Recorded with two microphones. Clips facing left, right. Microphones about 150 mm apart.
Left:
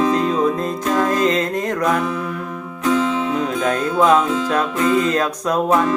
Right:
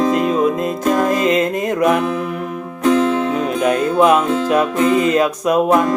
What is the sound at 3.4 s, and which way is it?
Music, 15° right (ahead or behind).